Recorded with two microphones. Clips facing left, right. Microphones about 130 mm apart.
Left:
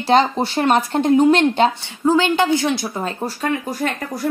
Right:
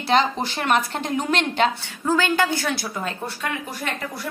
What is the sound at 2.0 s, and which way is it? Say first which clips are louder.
A woman's voice: left 5 dB; 20° left (ahead or behind).